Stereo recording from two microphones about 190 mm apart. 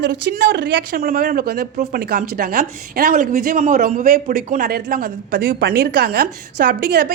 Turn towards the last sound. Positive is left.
turn(degrees=-60)  # may be behind; listen again after turning